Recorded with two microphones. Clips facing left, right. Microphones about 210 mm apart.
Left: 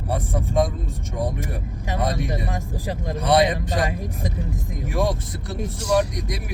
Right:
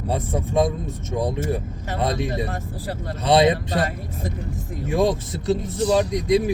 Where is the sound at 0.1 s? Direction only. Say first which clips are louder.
Right 1 dB; 25° right (ahead or behind).